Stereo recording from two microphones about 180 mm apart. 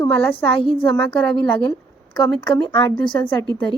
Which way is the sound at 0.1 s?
10° left (ahead or behind).